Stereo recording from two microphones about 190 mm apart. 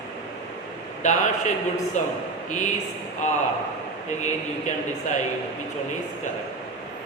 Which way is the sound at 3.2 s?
40° left (ahead or behind).